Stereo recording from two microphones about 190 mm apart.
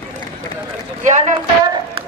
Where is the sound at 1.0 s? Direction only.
40° right (ahead or behind).